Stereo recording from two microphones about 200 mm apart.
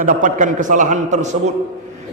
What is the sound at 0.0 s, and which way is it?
A man's voice, 40° right (ahead or behind).